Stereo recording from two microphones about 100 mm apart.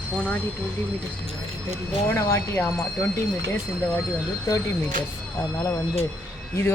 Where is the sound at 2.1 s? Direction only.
30° left (ahead or behind).